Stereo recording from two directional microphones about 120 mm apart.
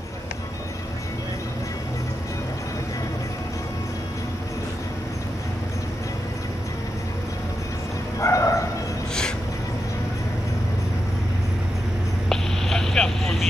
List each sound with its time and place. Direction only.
8.2 s bow-wow: 25° left (ahead or behind)
12.3 s vehicle: 5° left (ahead or behind)